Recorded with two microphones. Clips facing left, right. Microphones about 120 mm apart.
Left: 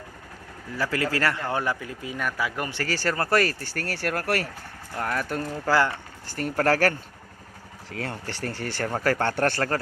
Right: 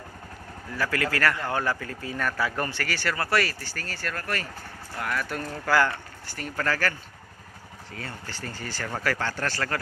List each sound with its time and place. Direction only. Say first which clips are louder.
0.8 s speech: left 1 dB; 25° left (ahead or behind)
2.8 s speech: left 3 dB; 40° left (ahead or behind)
3.8 s speech: left 6 dB; 70° left (ahead or behind)
4.9 s speech: left 3 dB; 35° left (ahead or behind)
5.6 s speech: left 1 dB; 25° left (ahead or behind)
6.3 s speech: left 6 dB; 50° left (ahead or behind)
7.9 s speech: left 6 dB; 85° left; by 9.6 s 55° left (ahead or behind)